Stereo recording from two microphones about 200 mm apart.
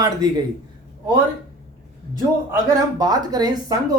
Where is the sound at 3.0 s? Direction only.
20° right (ahead or behind).